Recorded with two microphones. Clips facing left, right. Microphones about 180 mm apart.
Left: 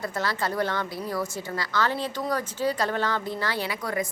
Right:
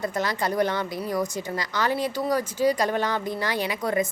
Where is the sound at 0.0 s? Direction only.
20° right (ahead or behind).